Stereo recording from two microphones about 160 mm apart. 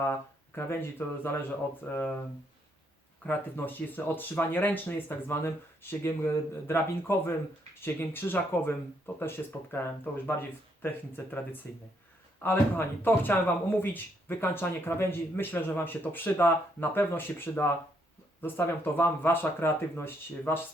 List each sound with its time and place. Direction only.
0.0 s a man's voice: 15° left (ahead or behind)
3.2 s a man's voice: 10° left (ahead or behind)
11.6 s a man's voice: 15° left (ahead or behind)